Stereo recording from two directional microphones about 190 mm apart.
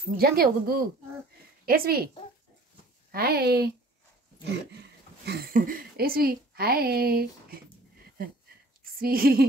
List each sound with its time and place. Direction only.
0.2 s a woman's voice: 50° right (ahead or behind)
3.1 s speech: 55° right (ahead or behind)
5.2 s a woman's voice: 50° right (ahead or behind)
8.9 s a woman's voice: 50° right (ahead or behind)